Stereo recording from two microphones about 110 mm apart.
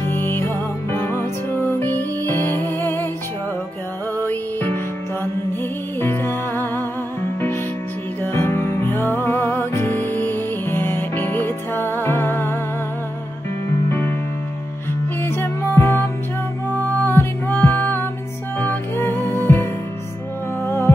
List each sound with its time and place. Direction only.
0.0 s music: 20° left (ahead or behind)
4.2 s music: 20° left (ahead or behind)
5.9 s music: 20° left (ahead or behind)
8.2 s music: 20° left (ahead or behind)
13.8 s music: 20° left (ahead or behind)
15.2 s music: 20° left (ahead or behind)